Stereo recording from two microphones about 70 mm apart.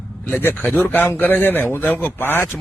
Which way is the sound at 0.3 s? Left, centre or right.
Left.